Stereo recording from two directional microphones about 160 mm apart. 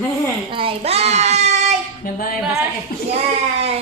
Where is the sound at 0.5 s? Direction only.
35° right (ahead or behind).